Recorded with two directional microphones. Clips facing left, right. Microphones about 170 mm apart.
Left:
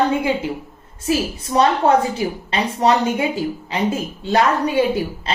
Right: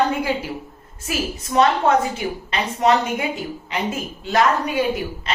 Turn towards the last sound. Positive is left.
turn(degrees=30)  # may be behind; listen again after turning